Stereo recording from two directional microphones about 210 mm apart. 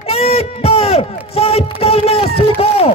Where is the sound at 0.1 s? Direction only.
30° left (ahead or behind).